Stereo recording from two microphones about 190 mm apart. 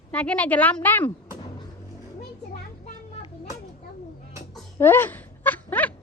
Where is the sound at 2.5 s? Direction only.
30° left (ahead or behind).